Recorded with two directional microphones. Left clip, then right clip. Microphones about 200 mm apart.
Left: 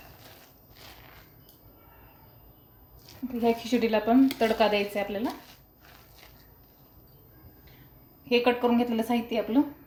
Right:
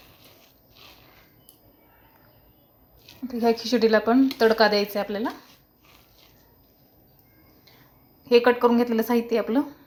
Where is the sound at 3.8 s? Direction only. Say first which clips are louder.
Right 4 dB; 25° right (ahead or behind).